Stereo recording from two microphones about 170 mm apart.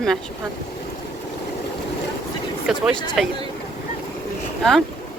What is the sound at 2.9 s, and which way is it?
Speech, 25° left (ahead or behind).